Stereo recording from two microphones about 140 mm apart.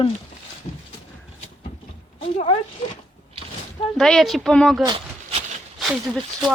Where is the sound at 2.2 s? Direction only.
45° left (ahead or behind).